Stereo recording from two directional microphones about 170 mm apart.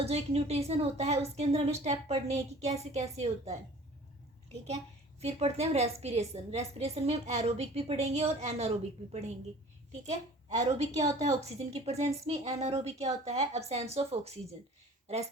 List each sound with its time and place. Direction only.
0.0 s a woman's voice: 35° right (ahead or behind)
5.2 s a woman's voice: 40° right (ahead or behind)
10.5 s a woman's voice: 20° right (ahead or behind)
11.3 s a woman's voice: 40° right (ahead or behind)